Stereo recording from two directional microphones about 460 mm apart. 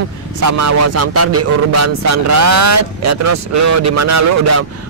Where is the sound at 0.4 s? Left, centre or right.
Right.